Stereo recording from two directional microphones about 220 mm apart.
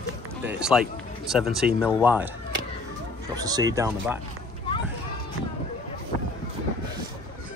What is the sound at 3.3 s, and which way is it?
Speech, 15° right (ahead or behind).